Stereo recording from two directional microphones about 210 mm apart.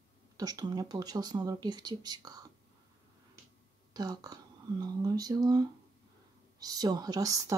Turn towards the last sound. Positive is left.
turn(degrees=-15)  # may be behind; listen again after turning